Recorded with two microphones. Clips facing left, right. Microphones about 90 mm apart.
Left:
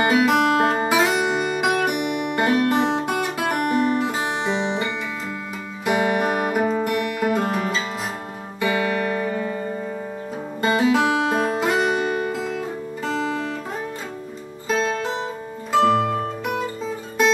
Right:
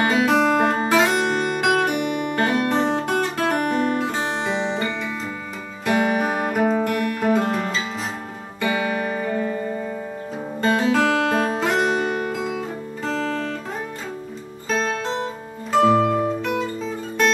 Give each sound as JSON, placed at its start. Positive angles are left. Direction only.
{"t": 0.0, "sound": "music", "side_deg": 5}
{"t": 10.6, "sound": "music", "side_deg": 5}
{"t": 14.7, "sound": "music", "side_deg": 0}
{"t": 16.0, "sound": "music", "side_deg": 0}